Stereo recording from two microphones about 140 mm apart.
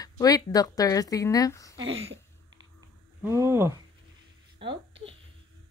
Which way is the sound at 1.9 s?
45° right (ahead or behind).